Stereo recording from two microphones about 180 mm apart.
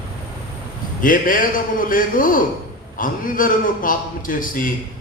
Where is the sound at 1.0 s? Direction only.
50° left (ahead or behind).